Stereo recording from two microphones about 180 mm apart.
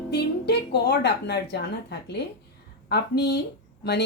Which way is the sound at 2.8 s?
65° left (ahead or behind).